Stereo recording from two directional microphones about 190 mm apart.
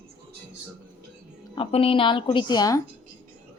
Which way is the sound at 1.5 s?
30° left (ahead or behind).